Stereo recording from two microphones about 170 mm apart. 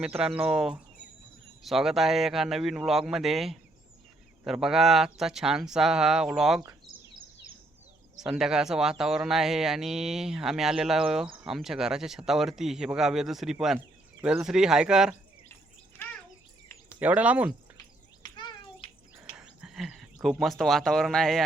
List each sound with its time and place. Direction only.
0.0 s speech: 5° right (ahead or behind)
8.2 s speech: 5° right (ahead or behind)
17.0 s speech: 10° right (ahead or behind)
18.2 s a sound: 25° left (ahead or behind)
19.1 s a sound: 5° right (ahead or behind)
20.4 s speech: centre (ahead or behind)